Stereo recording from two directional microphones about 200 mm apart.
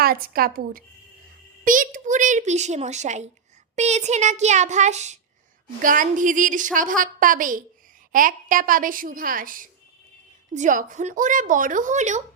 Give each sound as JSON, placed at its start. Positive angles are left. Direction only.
{"t": 0.0, "sound": "a woman's voice", "side_deg": -50}